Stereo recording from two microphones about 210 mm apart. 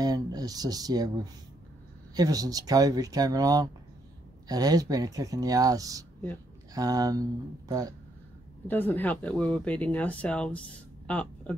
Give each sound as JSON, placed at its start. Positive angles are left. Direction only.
{"t": 0.0, "sound": "speech", "side_deg": -20}
{"t": 8.6, "sound": "speech", "side_deg": 10}
{"t": 11.1, "sound": "a sound", "side_deg": 5}